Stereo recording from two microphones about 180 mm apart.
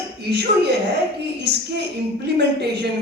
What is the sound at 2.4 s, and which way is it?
Speech, 65° right (ahead or behind).